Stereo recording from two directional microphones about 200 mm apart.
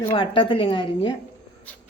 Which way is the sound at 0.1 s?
25° left (ahead or behind).